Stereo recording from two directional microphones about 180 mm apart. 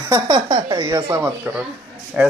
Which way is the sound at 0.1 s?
25° right (ahead or behind).